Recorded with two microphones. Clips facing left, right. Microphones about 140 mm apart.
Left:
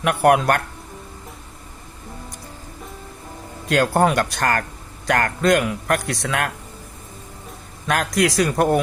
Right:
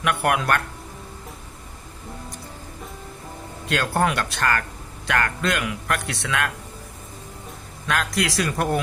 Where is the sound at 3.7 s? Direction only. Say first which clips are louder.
Left 5 dB; 40° left (ahead or behind).